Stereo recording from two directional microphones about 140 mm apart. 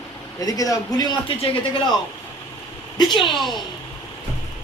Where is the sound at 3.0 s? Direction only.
35° left (ahead or behind).